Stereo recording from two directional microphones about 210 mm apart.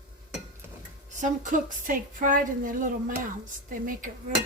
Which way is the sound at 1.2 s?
35° right (ahead or behind).